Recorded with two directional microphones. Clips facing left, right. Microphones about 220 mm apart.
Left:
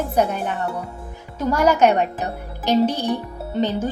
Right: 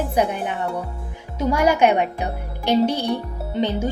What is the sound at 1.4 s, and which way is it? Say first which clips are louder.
Speech: left 1 dB; 10° right (ahead or behind).